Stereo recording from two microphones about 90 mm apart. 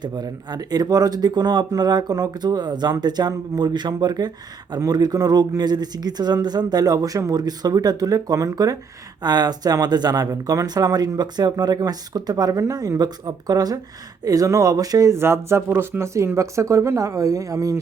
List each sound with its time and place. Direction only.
0.0 s speech: 50° right (ahead or behind)
15.2 s speech: 30° right (ahead or behind)